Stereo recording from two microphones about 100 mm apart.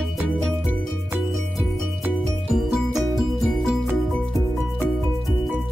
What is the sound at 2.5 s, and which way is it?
Music, centre (ahead or behind).